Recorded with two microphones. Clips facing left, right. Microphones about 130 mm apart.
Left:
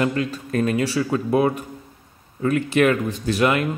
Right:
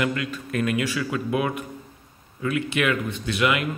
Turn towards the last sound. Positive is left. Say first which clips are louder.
# left 4 dB
turn(degrees=40)  # may be behind; listen again after turning